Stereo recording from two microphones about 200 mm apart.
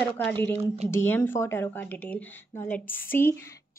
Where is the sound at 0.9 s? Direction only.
10° left (ahead or behind).